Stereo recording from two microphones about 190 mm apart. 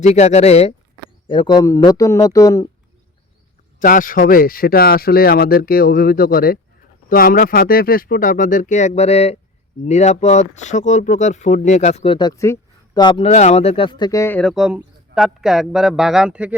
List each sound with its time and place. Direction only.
0.0 s speech: 35° left (ahead or behind)
1.3 s a man's voice: 25° left (ahead or behind)
3.8 s a man's voice: 45° left (ahead or behind); by 16.6 s 5° right (ahead or behind)